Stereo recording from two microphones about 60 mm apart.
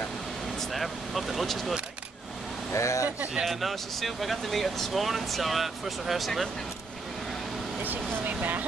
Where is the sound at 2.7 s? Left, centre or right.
Left.